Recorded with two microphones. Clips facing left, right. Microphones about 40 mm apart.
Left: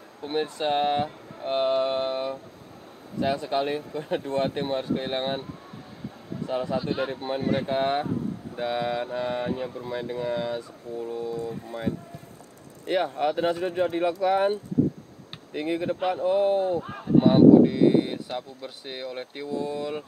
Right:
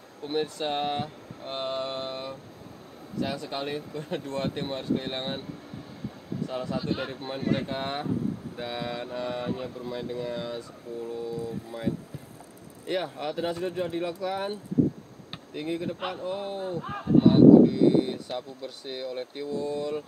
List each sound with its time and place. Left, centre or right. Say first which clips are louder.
0.2 s speech: left 2 dB; centre
16.8 s a sound: right 2 dB; centre
17.2 s speech: even; centre